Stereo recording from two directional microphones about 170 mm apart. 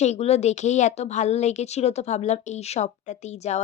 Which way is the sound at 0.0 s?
40° left (ahead or behind).